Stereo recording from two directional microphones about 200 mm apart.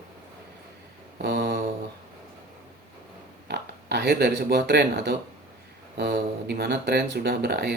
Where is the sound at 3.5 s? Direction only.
55° right (ahead or behind).